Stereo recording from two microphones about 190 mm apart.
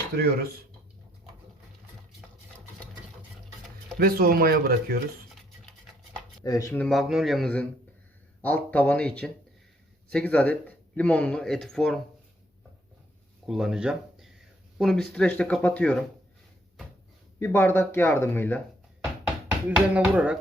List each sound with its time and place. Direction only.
0.2 s speech: 55° right (ahead or behind)
3.9 s speech: 50° right (ahead or behind)
6.4 s speech: 20° left (ahead or behind)
13.5 s speech: 5° right (ahead or behind)
17.4 s speech: 10° left (ahead or behind)
19.5 s speech: 5° right (ahead or behind)